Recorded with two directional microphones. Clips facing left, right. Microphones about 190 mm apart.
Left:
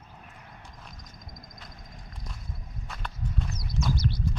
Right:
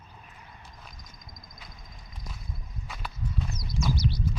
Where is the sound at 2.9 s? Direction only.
Centre (ahead or behind).